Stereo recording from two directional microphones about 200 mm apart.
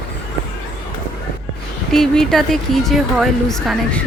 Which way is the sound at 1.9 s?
Centre (ahead or behind).